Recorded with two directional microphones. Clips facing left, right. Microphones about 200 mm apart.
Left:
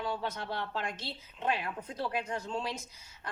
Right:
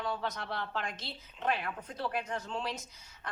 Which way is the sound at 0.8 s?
10° left (ahead or behind).